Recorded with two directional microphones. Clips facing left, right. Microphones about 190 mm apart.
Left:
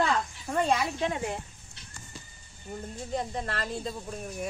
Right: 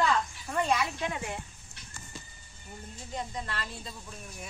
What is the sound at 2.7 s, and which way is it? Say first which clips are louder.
Speech: left 7 dB; 45° left (ahead or behind).